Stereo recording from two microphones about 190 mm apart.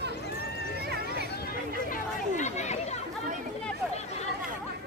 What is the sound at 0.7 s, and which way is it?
Horse, 55° right (ahead or behind).